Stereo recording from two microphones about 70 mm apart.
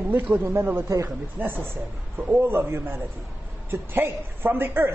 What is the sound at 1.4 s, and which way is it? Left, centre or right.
Speech, right.